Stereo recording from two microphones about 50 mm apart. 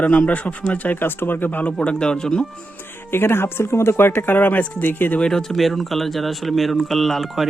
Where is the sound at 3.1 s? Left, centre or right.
Left.